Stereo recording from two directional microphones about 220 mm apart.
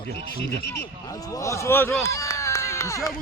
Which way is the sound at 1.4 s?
15° left (ahead or behind).